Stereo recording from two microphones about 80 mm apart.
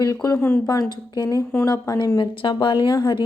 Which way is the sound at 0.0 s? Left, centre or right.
Left.